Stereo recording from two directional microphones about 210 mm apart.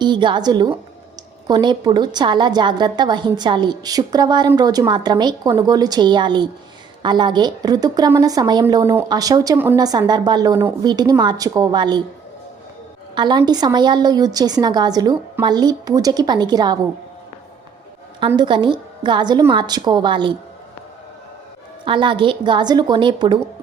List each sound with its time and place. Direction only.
0.0 s a woman's voice: 20° right (ahead or behind)
13.1 s a woman's voice: 20° right (ahead or behind)
18.3 s a woman's voice: 20° right (ahead or behind)
21.8 s a woman's voice: 25° right (ahead or behind)